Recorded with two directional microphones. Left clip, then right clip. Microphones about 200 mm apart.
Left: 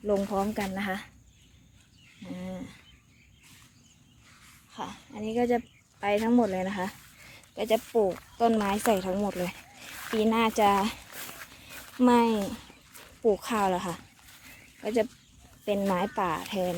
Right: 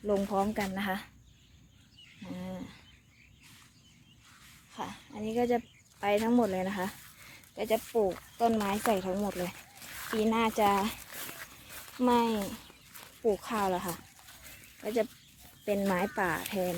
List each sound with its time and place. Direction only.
0.0 s a woman's voice: 5° left (ahead or behind)
2.2 s a sound: centre (ahead or behind)
4.7 s speech: centre (ahead or behind)
11.9 s speech: 20° left (ahead or behind)
15.6 s speech: 5° left (ahead or behind)